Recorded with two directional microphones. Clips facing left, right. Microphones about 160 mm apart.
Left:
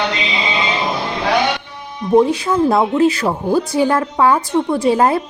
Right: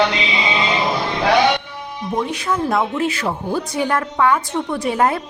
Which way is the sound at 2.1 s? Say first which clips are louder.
Left 9 dB; 30° left (ahead or behind).